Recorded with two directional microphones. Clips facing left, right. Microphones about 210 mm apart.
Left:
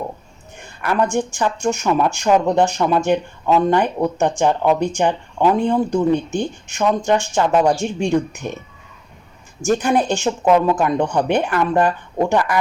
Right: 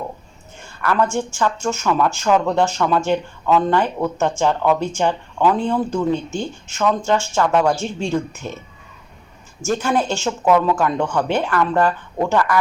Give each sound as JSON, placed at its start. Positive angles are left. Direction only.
{"t": 0.6, "sound": "speech", "side_deg": 20}
{"t": 9.6, "sound": "speech", "side_deg": 15}